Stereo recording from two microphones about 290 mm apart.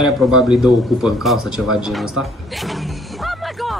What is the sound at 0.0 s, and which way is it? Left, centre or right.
A man's voice, centre.